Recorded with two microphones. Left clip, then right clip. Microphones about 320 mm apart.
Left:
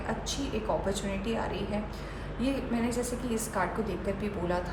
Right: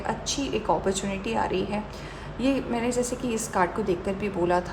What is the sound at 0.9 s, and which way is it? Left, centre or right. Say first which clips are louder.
A woman's voice: right 4 dB; right.